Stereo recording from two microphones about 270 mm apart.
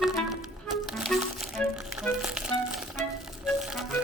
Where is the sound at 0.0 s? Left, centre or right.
Centre.